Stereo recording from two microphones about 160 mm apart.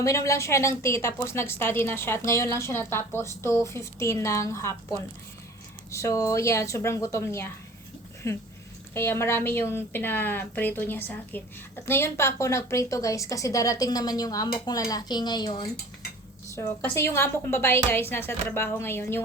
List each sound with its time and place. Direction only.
0.0 s a woman's voice: 20° left (ahead or behind)